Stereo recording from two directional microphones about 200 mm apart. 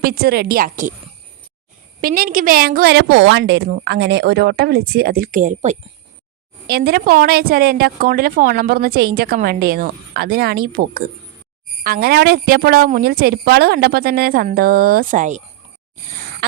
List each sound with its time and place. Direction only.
0.0 s a woman's voice: 50° right (ahead or behind)
2.0 s a woman's voice: 45° right (ahead or behind)
6.7 s a woman's voice: 50° right (ahead or behind)
16.4 s throat clearing: 55° right (ahead or behind)